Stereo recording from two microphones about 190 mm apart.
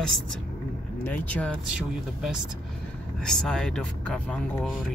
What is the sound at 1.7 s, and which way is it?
Speech, 5° right (ahead or behind).